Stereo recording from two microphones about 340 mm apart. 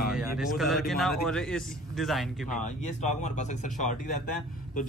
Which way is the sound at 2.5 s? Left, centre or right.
Left.